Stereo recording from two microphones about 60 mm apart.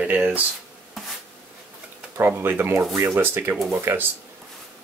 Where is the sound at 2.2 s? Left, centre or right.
Right.